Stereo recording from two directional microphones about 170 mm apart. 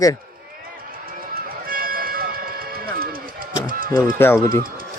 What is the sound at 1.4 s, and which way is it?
Music, 60° right (ahead or behind).